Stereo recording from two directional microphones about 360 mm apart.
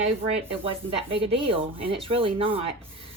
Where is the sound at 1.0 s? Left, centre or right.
Centre.